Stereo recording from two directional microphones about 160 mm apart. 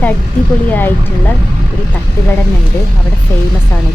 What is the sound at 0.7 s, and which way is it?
Speech, 10° left (ahead or behind).